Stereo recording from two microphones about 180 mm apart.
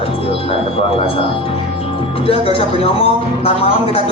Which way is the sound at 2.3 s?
30° left (ahead or behind).